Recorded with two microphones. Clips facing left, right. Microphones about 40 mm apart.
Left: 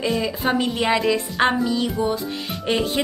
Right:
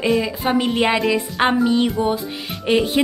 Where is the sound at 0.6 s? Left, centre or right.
Right.